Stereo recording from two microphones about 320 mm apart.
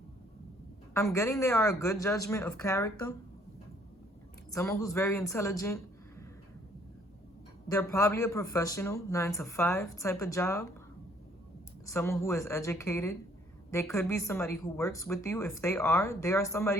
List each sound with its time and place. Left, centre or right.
0.9 s speech: centre
4.5 s a man's voice: centre
7.7 s speech: centre
11.9 s speech: centre